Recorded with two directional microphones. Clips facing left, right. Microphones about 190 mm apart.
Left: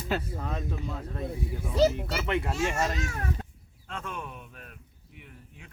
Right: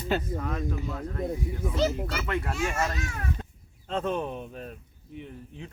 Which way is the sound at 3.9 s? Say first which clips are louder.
Right 10 dB; 30° right (ahead or behind).